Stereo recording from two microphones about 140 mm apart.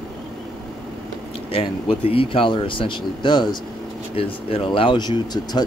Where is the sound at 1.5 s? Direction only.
40° left (ahead or behind).